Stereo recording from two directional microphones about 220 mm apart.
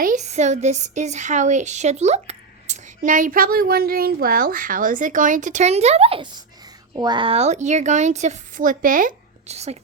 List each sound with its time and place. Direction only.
0.0 s a woman's voice: 35° right (ahead or behind)